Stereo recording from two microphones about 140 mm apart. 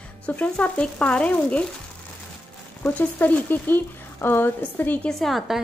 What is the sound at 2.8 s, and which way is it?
Speech, 15° left (ahead or behind).